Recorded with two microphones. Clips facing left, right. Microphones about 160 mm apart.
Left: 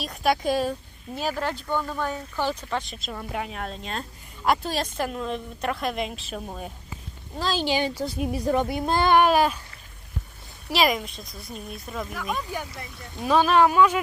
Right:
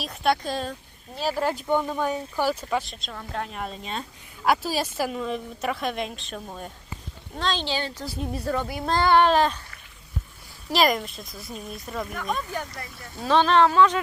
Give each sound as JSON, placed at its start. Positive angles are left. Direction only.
{"t": 0.0, "sound": "a woman's voice", "side_deg": 0}
{"t": 1.3, "sound": "a woman's voice", "side_deg": -10}
{"t": 10.7, "sound": "a woman's voice", "side_deg": 0}